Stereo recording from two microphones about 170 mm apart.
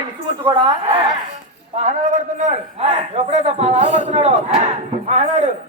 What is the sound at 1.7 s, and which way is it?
A man's voice, 45° right (ahead or behind).